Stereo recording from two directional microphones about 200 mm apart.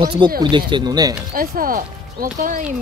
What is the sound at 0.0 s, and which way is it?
Speech, 25° right (ahead or behind).